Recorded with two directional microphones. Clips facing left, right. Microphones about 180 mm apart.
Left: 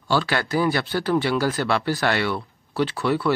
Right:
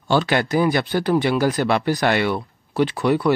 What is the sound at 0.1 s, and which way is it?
Speech, 20° right (ahead or behind).